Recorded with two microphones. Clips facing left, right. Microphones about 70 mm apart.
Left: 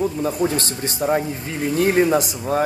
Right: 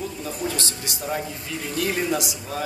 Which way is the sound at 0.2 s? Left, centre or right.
Left.